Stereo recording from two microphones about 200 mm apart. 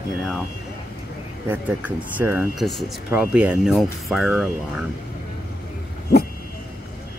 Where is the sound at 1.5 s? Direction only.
5° right (ahead or behind).